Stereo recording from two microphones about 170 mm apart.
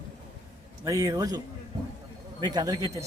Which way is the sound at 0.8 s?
20° right (ahead or behind).